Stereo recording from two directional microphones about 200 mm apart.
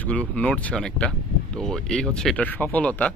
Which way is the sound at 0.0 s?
5° left (ahead or behind).